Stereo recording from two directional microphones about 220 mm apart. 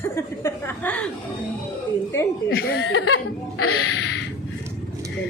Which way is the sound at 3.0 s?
80° left.